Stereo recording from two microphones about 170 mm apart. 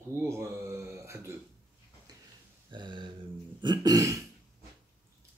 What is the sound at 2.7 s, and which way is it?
Throat clearing, 25° right (ahead or behind).